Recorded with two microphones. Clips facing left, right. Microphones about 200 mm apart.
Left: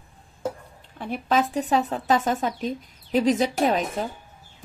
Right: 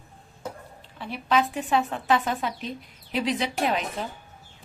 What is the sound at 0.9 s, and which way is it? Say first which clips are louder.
Speech: left 1 dB; 50° left (ahead or behind).